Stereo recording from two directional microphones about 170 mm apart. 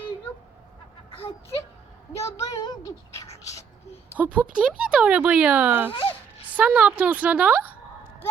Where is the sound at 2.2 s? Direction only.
20° left (ahead or behind).